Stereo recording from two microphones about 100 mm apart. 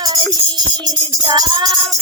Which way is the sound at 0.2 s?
45° right (ahead or behind).